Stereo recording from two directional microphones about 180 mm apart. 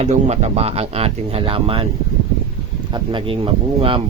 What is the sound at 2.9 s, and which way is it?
Speech, 25° right (ahead or behind).